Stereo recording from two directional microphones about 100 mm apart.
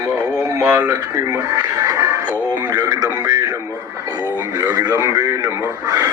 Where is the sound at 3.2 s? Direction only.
30° right (ahead or behind).